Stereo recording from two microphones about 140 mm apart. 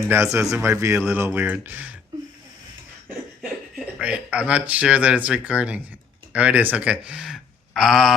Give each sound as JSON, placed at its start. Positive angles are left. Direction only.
{"t": 0.1, "sound": "speech", "side_deg": -20}
{"t": 3.4, "sound": "speech", "side_deg": -5}